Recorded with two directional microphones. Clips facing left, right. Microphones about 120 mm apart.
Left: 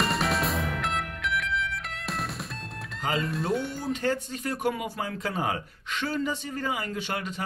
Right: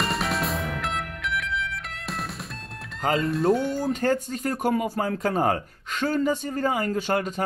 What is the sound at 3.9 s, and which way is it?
Speech, 45° right (ahead or behind).